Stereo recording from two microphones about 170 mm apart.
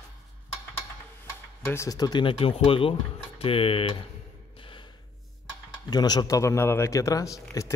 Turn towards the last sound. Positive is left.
turn(degrees=20)  # may be behind; listen again after turning